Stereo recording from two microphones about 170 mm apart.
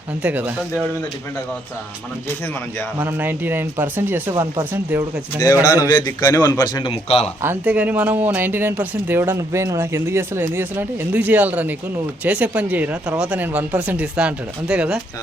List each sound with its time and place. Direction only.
0.2 s speech: 10° right (ahead or behind)
3.0 s speech: 10° right (ahead or behind)
5.4 s a man's voice: 20° left (ahead or behind)
7.4 s speech: 10° right (ahead or behind)